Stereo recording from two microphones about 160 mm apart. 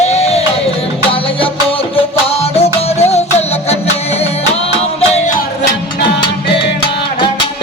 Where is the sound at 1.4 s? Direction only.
35° left (ahead or behind).